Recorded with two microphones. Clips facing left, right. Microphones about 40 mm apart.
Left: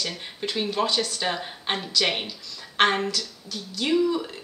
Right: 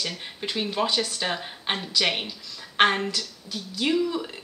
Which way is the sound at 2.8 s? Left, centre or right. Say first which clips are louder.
Even; centre.